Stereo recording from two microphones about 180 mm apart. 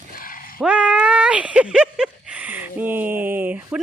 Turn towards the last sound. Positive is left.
turn(degrees=-10)  # may be behind; listen again after turning